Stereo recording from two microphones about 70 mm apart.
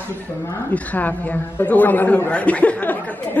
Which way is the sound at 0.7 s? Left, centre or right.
Left.